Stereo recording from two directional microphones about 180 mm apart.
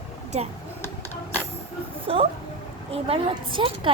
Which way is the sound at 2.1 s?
30° right (ahead or behind).